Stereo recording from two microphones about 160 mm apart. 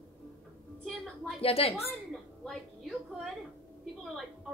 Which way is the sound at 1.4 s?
35° left (ahead or behind).